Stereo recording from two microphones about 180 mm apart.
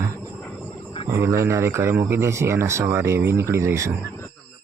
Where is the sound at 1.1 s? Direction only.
15° right (ahead or behind).